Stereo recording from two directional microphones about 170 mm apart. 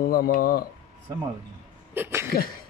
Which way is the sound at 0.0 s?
55° left (ahead or behind).